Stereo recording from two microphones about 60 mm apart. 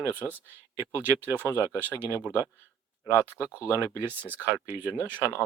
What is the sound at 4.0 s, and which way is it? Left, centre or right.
Speech, right.